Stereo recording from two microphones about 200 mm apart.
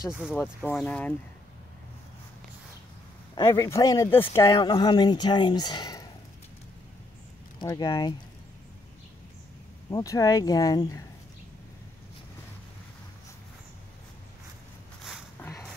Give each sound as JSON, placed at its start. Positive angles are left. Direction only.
{"t": 0.7, "sound": "speech", "side_deg": 5}
{"t": 3.3, "sound": "speech", "side_deg": 15}
{"t": 7.5, "sound": "speech", "side_deg": 20}
{"t": 9.8, "sound": "speech", "side_deg": 15}
{"t": 15.4, "sound": "a sound", "side_deg": 10}